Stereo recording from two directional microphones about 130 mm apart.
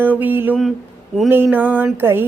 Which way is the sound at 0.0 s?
15° right (ahead or behind).